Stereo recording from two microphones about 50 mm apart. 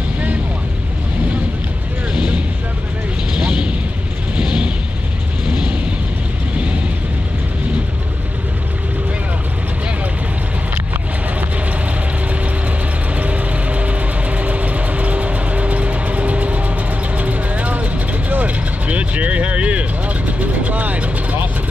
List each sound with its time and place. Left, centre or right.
2.1 s vehicle: right
5.5 s a sound: right
13.1 s music: right
17.2 s vehicle: right